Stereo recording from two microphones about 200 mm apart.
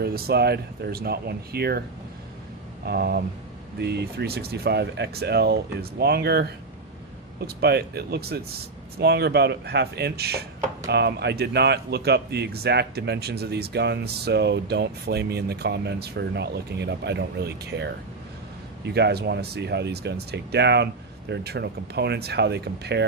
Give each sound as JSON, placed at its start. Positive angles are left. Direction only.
{"t": 0.0, "sound": "speech", "side_deg": -50}
{"t": 2.8, "sound": "speech", "side_deg": -50}
{"t": 18.9, "sound": "speech", "side_deg": -55}